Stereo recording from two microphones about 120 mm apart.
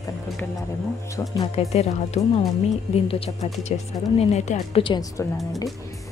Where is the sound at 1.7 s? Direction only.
60° left (ahead or behind).